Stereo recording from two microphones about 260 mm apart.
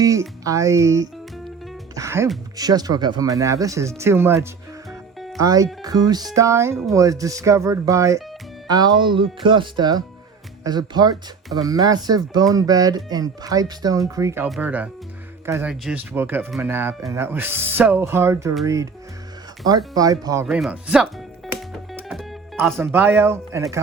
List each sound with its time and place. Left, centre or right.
0.0 s speech: centre
19.9 s speech: centre